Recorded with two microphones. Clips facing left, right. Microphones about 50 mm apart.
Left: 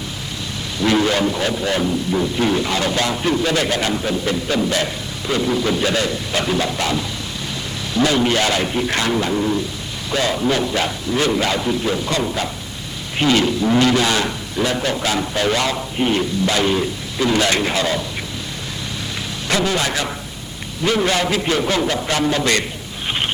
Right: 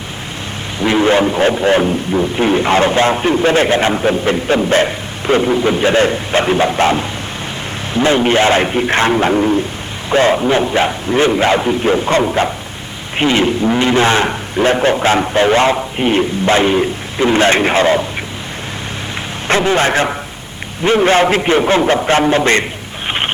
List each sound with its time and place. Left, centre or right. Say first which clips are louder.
0.8 s a man's voice: right 5 dB; right
19.5 s a man's voice: right 7 dB; right
23.0 s a sound: right 4 dB; right